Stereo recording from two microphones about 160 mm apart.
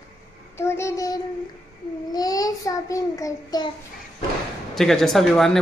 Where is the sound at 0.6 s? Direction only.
15° left (ahead or behind).